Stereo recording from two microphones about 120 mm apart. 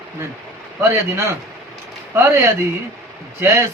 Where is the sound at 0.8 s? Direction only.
20° right (ahead or behind).